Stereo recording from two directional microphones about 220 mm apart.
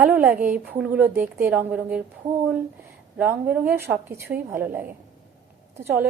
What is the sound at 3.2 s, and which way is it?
A woman's voice, 5° right (ahead or behind).